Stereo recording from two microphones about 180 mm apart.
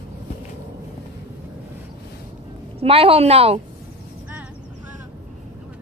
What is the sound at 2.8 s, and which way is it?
Speech, 30° right (ahead or behind).